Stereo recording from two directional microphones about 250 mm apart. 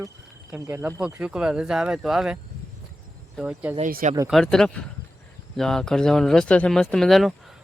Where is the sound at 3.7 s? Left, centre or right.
Right.